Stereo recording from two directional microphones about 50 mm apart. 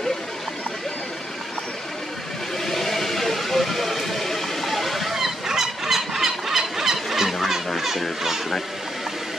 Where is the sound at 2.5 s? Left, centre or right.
Centre.